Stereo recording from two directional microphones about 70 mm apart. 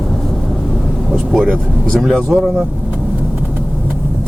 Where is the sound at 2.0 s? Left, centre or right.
Centre.